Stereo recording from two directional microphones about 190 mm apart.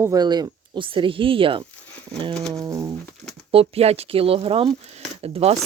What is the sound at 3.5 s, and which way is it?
Speech, 30° right (ahead or behind).